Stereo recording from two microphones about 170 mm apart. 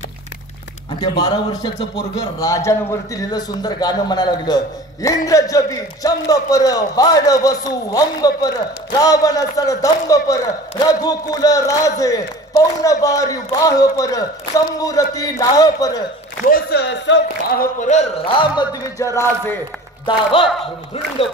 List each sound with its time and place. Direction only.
1.0 s a man's voice: 25° left (ahead or behind)
16.4 s speech: 60° left (ahead or behind); by 17.6 s 90° left
17.7 s speech: 45° left (ahead or behind)
18.2 s a man's voice: 25° left (ahead or behind)
20.1 s speech: 30° left (ahead or behind)